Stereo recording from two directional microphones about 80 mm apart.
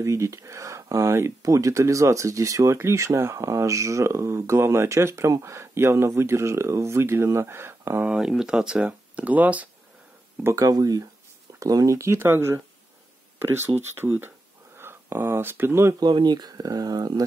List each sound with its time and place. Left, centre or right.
0.0 s speech: right
8.0 s speech: centre
10.5 s speech: right
13.7 s speech: right
16.0 s speech: right